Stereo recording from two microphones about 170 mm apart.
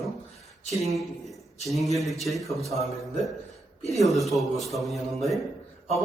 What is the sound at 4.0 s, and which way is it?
A man's voice, centre (ahead or behind).